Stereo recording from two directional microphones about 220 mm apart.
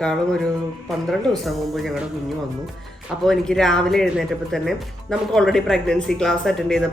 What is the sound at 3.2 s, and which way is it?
Speech, centre (ahead or behind).